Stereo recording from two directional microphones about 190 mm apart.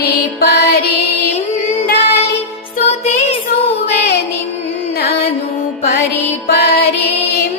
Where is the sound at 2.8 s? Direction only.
35° left (ahead or behind).